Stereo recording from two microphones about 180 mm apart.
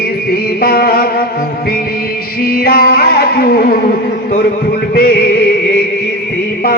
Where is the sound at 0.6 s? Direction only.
55° left (ahead or behind).